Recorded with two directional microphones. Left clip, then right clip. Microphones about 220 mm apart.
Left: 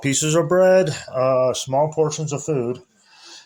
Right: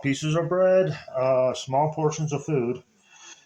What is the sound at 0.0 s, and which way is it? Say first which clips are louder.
Speech: left 6 dB; 55° left (ahead or behind).